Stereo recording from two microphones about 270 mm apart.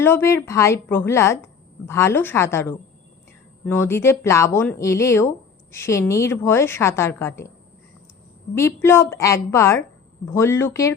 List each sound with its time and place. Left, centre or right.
0.0 s a woman's voice: centre
8.5 s a woman's voice: centre